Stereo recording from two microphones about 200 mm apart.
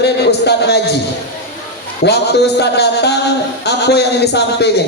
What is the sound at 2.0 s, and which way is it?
Speech, 55° left (ahead or behind).